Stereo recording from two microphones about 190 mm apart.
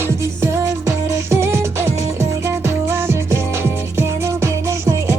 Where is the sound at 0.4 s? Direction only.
15° right (ahead or behind).